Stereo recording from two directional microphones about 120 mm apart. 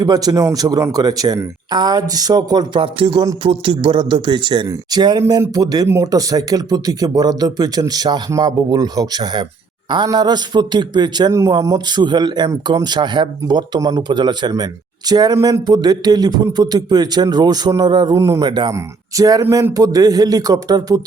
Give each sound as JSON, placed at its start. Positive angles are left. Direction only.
{"t": 0.0, "sound": "speech", "side_deg": -35}